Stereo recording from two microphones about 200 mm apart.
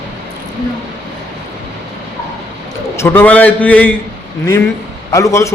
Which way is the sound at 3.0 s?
10° left (ahead or behind).